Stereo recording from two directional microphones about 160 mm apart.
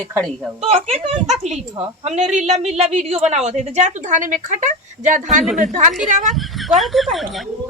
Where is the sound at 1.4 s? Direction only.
45° right (ahead or behind).